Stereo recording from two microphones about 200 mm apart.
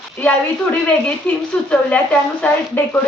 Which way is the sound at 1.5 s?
5° left (ahead or behind).